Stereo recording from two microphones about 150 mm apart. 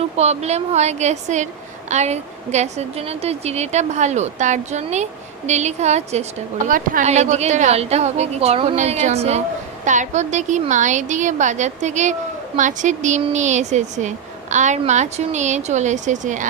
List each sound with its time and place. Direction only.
0.2 s a woman's voice: 45° right (ahead or behind)
6.7 s a woman's voice: 65° right (ahead or behind)